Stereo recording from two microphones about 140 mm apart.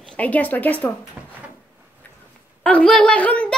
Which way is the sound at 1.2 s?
5° right (ahead or behind).